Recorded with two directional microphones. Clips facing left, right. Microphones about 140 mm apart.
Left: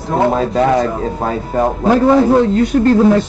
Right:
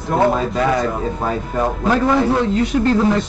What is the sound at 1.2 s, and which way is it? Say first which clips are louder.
A man's voice: left 5 dB; 40° left (ahead or behind).